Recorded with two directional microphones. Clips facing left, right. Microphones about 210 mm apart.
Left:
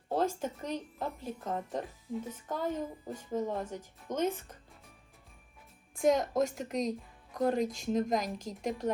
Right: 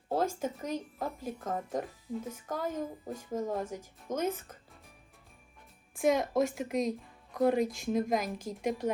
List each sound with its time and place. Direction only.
0.1 s speech: 5° right (ahead or behind)
5.9 s a woman's voice: 5° right (ahead or behind)